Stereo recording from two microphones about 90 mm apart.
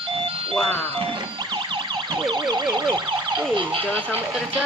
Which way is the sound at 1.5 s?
60° right (ahead or behind).